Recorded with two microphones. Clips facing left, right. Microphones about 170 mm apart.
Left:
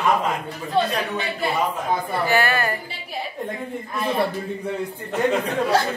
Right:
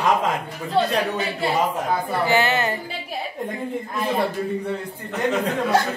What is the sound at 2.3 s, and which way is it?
Speech, 20° right (ahead or behind).